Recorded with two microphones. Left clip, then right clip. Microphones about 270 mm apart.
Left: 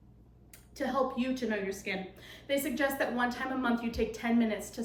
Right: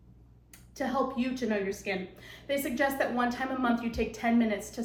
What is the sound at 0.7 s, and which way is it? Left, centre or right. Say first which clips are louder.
A woman's voice: right 1 dB; centre.